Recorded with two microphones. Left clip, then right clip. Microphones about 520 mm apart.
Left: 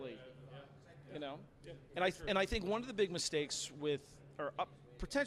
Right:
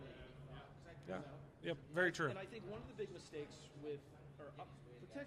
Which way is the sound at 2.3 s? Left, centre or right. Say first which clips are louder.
Left 15 dB; left.